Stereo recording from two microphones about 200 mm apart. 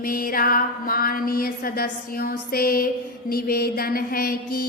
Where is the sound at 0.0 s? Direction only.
45° left (ahead or behind).